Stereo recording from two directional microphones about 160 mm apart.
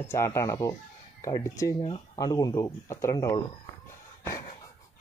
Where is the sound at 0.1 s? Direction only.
20° left (ahead or behind).